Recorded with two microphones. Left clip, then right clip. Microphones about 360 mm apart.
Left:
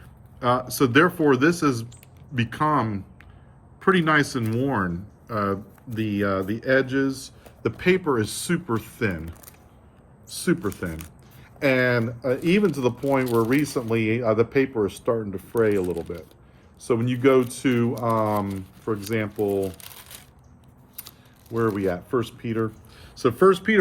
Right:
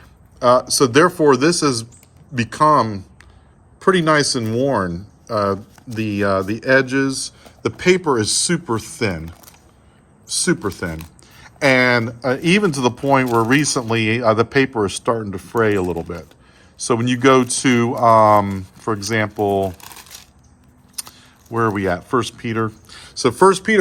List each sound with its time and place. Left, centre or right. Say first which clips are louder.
0.3 s speech: right 9 dB; centre
21.0 s keys jangling: right 12 dB; right
21.5 s speech: right 5 dB; right